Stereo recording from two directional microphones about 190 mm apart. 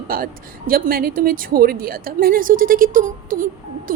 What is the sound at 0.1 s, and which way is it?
A woman's voice, 50° right (ahead or behind).